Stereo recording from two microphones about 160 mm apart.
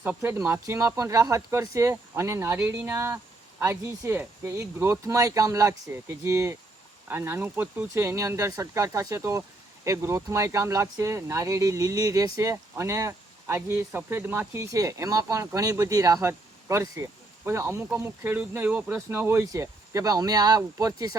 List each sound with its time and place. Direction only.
0.0 s speech: 10° right (ahead or behind)